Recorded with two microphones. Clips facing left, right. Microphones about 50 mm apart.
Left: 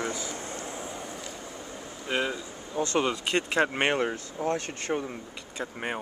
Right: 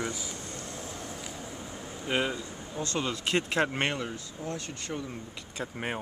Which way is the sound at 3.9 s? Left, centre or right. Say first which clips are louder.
Left 7 dB; left.